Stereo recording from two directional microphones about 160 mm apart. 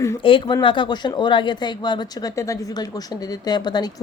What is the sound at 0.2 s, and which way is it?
Speech, 30° left (ahead or behind).